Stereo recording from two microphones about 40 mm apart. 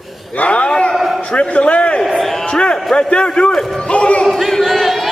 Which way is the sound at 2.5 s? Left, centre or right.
Left.